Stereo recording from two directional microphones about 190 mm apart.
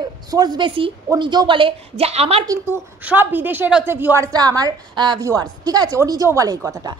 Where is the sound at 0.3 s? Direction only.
20° right (ahead or behind).